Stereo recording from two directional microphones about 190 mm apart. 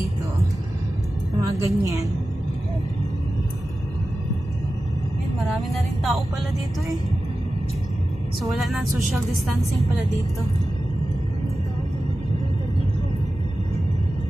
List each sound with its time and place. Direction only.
1.6 s a woman's voice: 15° right (ahead or behind)
5.4 s speech: centre (ahead or behind)
8.5 s speech: centre (ahead or behind)